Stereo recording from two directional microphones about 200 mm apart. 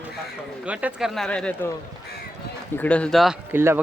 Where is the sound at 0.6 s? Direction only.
5° right (ahead or behind).